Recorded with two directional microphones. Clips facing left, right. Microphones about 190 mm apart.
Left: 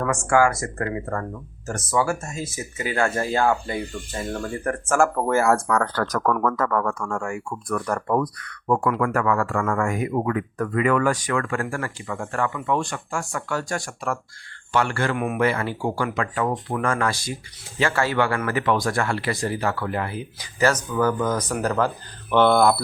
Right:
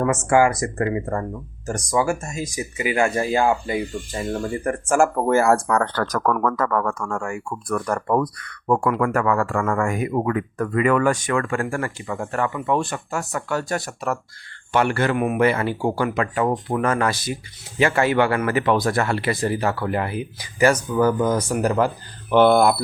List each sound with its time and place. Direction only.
0.0 s speech: 20° right (ahead or behind)
5.4 s speech: 30° right (ahead or behind)
14.7 s speech: 20° right (ahead or behind)
15.1 s speech: 5° right (ahead or behind)
15.4 s speech: 20° right (ahead or behind)